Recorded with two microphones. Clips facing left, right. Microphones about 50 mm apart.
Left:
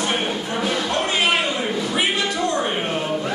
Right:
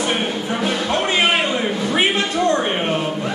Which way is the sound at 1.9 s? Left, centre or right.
Right.